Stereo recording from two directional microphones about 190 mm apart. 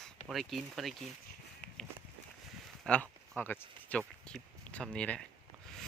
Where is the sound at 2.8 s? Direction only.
5° left (ahead or behind).